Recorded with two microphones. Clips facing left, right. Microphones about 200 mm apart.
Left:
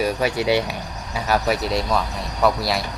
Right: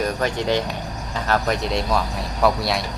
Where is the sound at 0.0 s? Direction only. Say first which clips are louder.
Left 2 dB; 10° left (ahead or behind).